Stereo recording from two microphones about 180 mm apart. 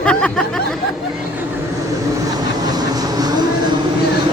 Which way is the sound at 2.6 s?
20° right (ahead or behind).